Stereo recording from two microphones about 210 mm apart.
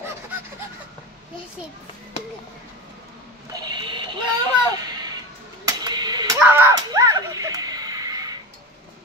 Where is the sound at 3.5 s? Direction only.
20° right (ahead or behind).